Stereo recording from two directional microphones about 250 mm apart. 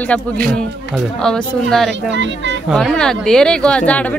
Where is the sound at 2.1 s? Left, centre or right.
Right.